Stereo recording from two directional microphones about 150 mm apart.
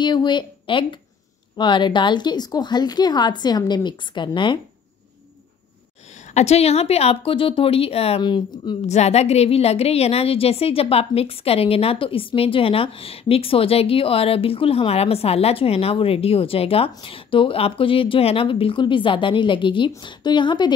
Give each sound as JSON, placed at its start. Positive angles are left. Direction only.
{"t": 0.0, "sound": "a woman's voice", "side_deg": 30}
{"t": 6.3, "sound": "a woman's voice", "side_deg": 45}
{"t": 8.2, "sound": "a woman's voice", "side_deg": 30}
{"t": 8.8, "sound": "a woman's voice", "side_deg": 45}